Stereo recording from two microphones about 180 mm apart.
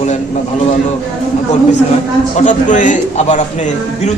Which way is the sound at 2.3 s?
45° left (ahead or behind).